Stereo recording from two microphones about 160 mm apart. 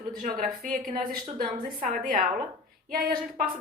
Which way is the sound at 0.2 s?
65° right (ahead or behind).